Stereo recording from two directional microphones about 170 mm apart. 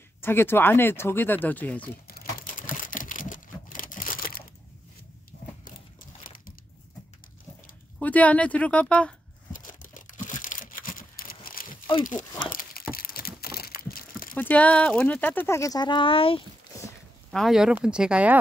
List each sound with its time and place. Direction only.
0.2 s speech: 15° left (ahead or behind)
2.0 s a sound: 55° left (ahead or behind)
8.0 s speech: 10° left (ahead or behind)
9.5 s tearing: 50° left (ahead or behind)
12.0 s speech: 50° left (ahead or behind)
12.9 s a sound: 60° left (ahead or behind)
14.3 s speech: 10° left (ahead or behind); by 16.4 s 30° left (ahead or behind)
17.3 s speech: centre (ahead or behind)